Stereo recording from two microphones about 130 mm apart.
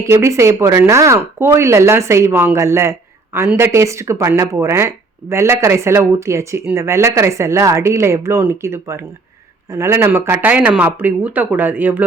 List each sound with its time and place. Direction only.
0.0 s speech: 20° right (ahead or behind)